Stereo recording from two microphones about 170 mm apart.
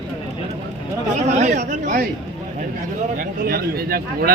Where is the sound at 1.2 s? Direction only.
45° right (ahead or behind).